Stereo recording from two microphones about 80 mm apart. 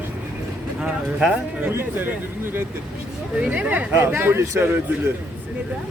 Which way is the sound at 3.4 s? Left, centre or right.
Centre.